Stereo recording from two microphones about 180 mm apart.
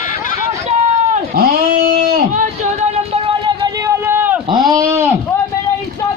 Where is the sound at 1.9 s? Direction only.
55° right (ahead or behind).